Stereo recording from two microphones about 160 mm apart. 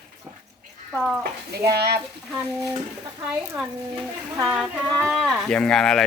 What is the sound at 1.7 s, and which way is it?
Speech, 90° right.